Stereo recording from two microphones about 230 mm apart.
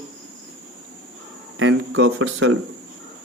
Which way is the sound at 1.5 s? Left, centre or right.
Right.